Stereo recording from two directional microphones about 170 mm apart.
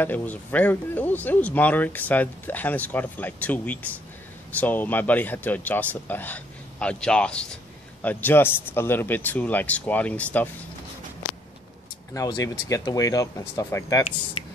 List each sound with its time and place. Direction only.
0.0 s speech: 10° left (ahead or behind)
12.1 s speech: 20° left (ahead or behind)
14.4 s a sound: 35° left (ahead or behind)